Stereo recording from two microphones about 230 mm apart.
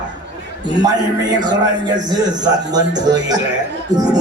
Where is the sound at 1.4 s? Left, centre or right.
Centre.